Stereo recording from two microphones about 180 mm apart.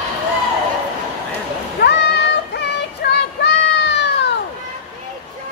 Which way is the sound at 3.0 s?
65° left (ahead or behind).